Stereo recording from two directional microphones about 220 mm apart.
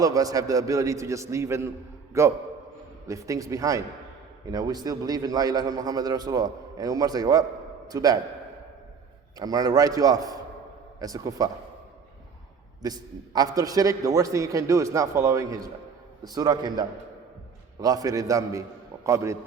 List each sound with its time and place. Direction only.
0.0 s a man's voice: 15° right (ahead or behind)
9.4 s a man's voice: 15° right (ahead or behind)
12.8 s a man's voice: 15° right (ahead or behind)